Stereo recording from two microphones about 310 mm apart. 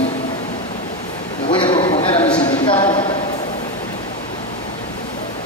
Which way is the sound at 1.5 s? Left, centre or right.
Centre.